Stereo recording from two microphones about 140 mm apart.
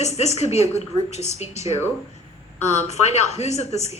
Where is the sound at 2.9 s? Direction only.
50° left (ahead or behind).